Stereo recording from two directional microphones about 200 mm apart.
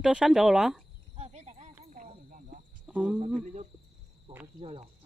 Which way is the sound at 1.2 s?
35° right (ahead or behind).